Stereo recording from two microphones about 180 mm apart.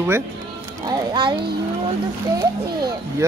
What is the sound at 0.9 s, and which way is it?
Speech, 25° right (ahead or behind).